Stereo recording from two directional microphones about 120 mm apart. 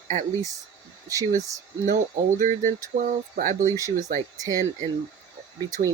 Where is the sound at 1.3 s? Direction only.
25° right (ahead or behind).